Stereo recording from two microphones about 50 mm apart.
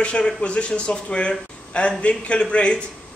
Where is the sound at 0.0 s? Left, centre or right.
Left.